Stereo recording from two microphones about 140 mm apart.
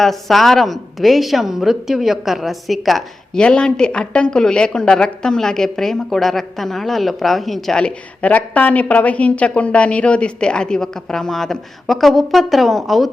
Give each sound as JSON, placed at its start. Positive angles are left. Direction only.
{"t": 0.0, "sound": "a woman's voice", "side_deg": 0}